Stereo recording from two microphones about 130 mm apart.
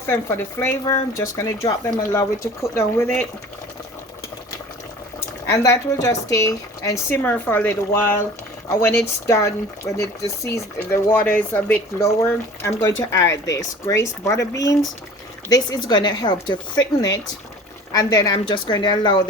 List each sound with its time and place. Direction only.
0.1 s speech: 15° left (ahead or behind)
5.5 s speech: 25° left (ahead or behind)
11.9 s a woman's voice: 20° left (ahead or behind)
17.9 s a woman's voice: 30° left (ahead or behind)